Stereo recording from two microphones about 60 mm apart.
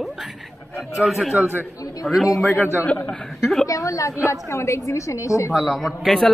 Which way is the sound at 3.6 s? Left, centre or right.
Left.